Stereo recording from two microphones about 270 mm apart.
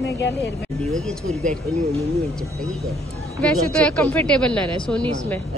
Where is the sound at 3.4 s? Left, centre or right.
Centre.